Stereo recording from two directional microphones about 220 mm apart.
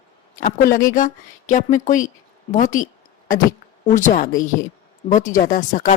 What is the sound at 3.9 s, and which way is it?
Speech, 35° left (ahead or behind).